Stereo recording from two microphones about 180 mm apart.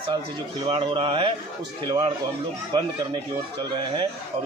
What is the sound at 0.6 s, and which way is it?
Speech, 25° right (ahead or behind).